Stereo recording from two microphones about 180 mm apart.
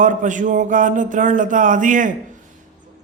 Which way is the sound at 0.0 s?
45° right (ahead or behind).